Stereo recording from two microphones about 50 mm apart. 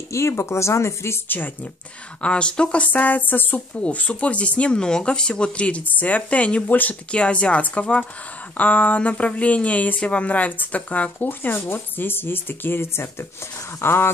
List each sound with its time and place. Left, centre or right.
0.1 s speech: left
1.3 s speech: left
2.2 s speech: left
2.8 s speech: left
3.8 s speech: left
11.2 s speech: left